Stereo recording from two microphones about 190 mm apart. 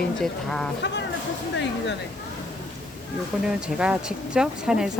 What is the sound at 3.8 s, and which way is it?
Speech, 5° right (ahead or behind).